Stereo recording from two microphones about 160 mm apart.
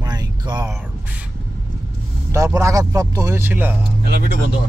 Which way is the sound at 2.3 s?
20° right (ahead or behind).